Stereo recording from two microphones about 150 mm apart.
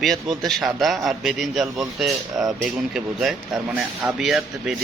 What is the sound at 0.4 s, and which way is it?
Speech, centre (ahead or behind).